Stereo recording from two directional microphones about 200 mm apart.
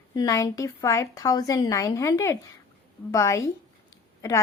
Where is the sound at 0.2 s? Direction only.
15° left (ahead or behind).